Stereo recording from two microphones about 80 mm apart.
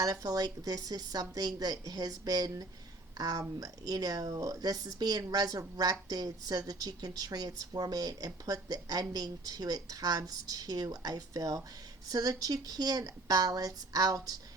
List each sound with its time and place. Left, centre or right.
0.0 s speech: right